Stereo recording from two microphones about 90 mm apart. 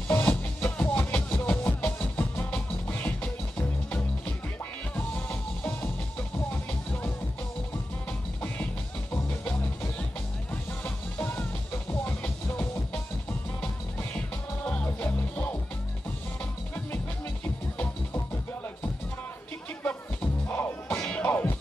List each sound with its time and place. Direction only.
0.1 s music: 20° left (ahead or behind)
6.3 s music: 25° left (ahead or behind)
9.1 s music: 20° left (ahead or behind)
17.7 s music: 25° left (ahead or behind)
19.8 s music: 20° left (ahead or behind)